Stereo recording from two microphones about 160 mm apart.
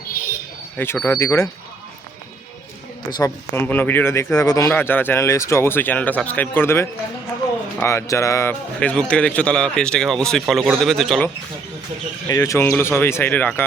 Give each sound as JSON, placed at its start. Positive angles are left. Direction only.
{"t": 0.8, "sound": "speech", "side_deg": 15}
{"t": 3.1, "sound": "a man's voice", "side_deg": 25}
{"t": 3.5, "sound": "speech", "side_deg": 15}
{"t": 12.3, "sound": "speech", "side_deg": 20}